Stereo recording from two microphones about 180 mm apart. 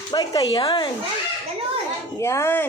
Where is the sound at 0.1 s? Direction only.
25° left (ahead or behind).